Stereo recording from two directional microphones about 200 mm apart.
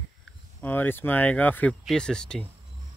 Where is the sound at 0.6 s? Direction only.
10° left (ahead or behind).